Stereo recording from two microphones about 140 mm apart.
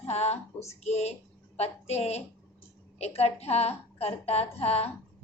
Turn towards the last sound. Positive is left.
turn(degrees=45)  # may be behind; listen again after turning